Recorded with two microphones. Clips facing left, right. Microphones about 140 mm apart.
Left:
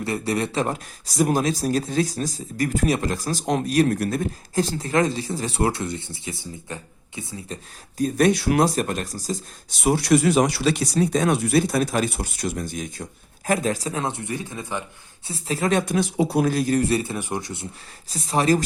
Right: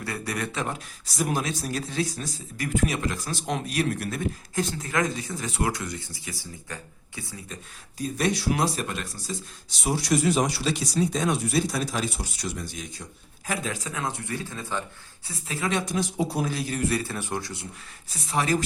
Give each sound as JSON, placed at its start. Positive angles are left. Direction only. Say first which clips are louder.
{"t": 0.0, "sound": "speech", "louder": "left 7 dB", "side_deg": 25}
{"t": 7.9, "sound": "speech", "louder": "left 7 dB", "side_deg": 55}
{"t": 9.8, "sound": "speech", "louder": "left 6 dB", "side_deg": 60}
{"t": 15.3, "sound": "speech", "louder": "left 6 dB", "side_deg": 35}
{"t": 15.9, "sound": "speech", "louder": "left 5 dB", "side_deg": 65}
{"t": 16.5, "sound": "speech", "louder": "left 9 dB", "side_deg": 45}
{"t": 16.8, "sound": "speech", "louder": "left 4 dB", "side_deg": 25}
{"t": 18.1, "sound": "speech", "louder": "left 5 dB", "side_deg": 35}